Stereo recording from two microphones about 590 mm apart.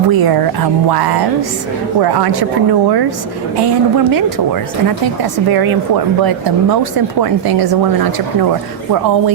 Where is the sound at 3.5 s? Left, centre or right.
Right.